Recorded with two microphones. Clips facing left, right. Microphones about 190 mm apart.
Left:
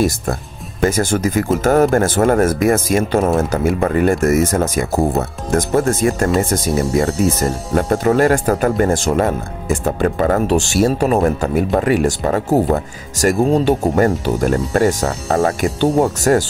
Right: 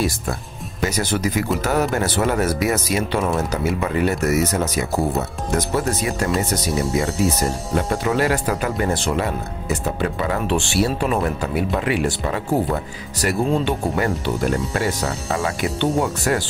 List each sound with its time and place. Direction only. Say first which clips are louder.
0.0 s speech: left 5 dB; 45° left (ahead or behind)